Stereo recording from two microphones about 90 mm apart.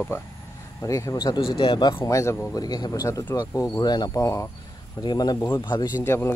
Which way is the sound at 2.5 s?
50° left (ahead or behind).